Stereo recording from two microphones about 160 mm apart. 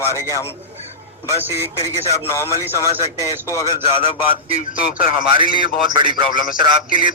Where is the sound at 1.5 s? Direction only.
15° left (ahead or behind).